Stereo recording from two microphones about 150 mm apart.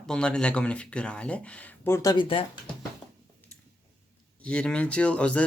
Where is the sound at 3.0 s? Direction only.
30° left (ahead or behind).